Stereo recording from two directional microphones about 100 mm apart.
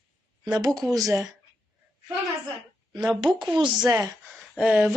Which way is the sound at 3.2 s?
50° right (ahead or behind).